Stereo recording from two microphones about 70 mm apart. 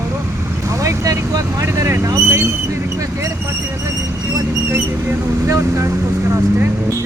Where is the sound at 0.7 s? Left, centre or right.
Right.